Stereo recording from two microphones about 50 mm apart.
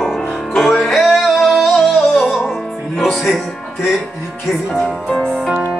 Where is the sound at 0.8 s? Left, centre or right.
Centre.